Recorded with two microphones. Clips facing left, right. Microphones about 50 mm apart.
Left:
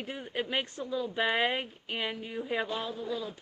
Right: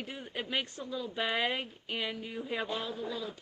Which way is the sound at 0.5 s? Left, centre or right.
Left.